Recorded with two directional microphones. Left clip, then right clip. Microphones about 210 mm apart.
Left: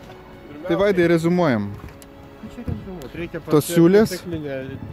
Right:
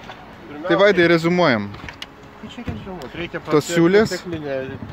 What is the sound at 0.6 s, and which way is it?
Speech, 15° left (ahead or behind).